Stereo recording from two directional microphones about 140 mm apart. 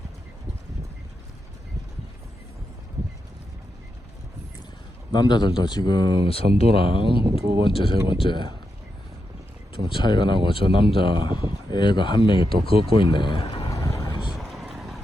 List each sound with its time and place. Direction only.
5.1 s speech: 30° left (ahead or behind)
7.9 s speech: 20° right (ahead or behind)
8.2 s speech: 35° left (ahead or behind)
9.9 s speech: 35° left (ahead or behind)
13.7 s vehicle: 25° left (ahead or behind)
14.0 s vehicle: 35° left (ahead or behind)
14.5 s vehicle: centre (ahead or behind)